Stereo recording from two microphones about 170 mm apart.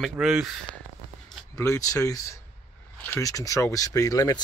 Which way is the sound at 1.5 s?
20° left (ahead or behind).